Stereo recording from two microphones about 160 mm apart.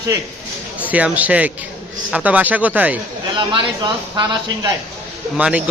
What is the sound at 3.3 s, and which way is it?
A man's voice, 30° right (ahead or behind).